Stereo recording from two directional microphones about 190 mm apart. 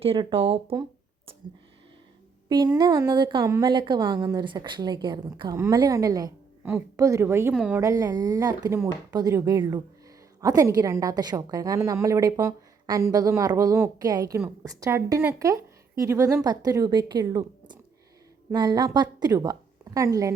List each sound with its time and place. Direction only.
0.0 s a woman's voice: 30° right (ahead or behind)
2.5 s a woman's voice: 20° right (ahead or behind); by 7.8 s 5° right (ahead or behind)
7.8 s a woman's voice: 15° right (ahead or behind)